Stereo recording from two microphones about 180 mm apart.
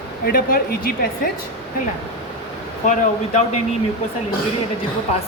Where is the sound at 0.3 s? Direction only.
55° left (ahead or behind).